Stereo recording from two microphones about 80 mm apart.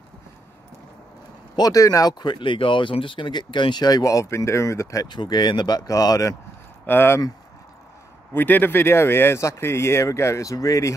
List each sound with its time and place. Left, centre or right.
1.6 s speech: left
2.1 s speech: left
5.0 s speech: left
5.8 s speech: left
6.9 s speech: left
8.4 s speech: left